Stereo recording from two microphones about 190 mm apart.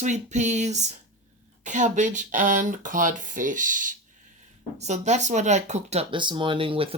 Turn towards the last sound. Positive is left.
turn(degrees=-25)  # may be behind; listen again after turning